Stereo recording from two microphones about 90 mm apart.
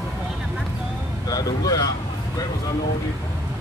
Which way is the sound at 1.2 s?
45° left (ahead or behind).